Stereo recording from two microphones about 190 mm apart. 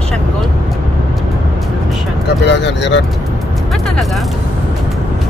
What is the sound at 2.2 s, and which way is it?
Vehicle, 65° left (ahead or behind).